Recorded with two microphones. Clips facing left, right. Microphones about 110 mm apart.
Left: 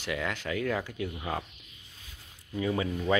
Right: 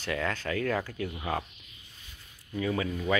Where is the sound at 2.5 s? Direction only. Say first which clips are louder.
Even; 20° left (ahead or behind).